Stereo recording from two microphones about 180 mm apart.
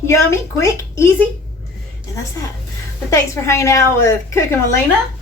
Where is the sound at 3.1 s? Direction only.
15° left (ahead or behind).